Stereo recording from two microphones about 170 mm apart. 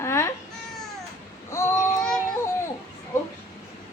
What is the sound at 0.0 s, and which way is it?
Babbling, 15° left (ahead or behind).